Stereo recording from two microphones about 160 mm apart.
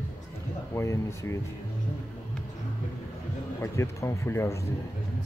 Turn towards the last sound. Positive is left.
turn(degrees=20)  # may be behind; listen again after turning